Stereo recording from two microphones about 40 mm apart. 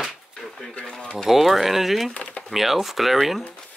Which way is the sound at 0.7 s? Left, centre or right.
Left.